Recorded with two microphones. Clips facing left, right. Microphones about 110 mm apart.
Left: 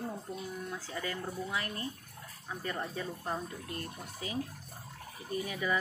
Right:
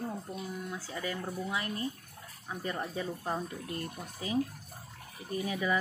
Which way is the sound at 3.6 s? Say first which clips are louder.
Right 3 dB; 30° right (ahead or behind).